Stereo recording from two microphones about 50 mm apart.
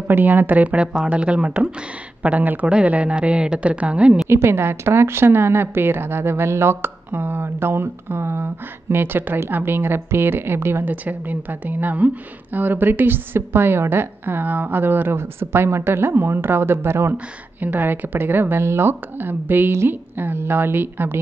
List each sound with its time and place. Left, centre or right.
0.1 s a woman's voice: right
4.3 s speech: right
10.9 s a woman's voice: right
17.1 s speech: right